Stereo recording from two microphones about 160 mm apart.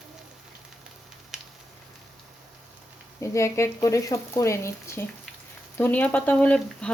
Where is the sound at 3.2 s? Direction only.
20° left (ahead or behind).